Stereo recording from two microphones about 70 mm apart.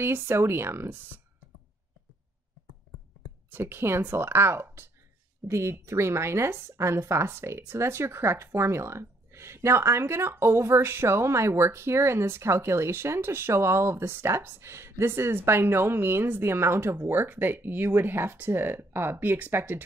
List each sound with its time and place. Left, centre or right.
0.0 s speech: right
3.4 s speech: right